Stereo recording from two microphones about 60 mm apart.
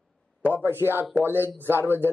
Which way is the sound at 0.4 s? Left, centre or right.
Right.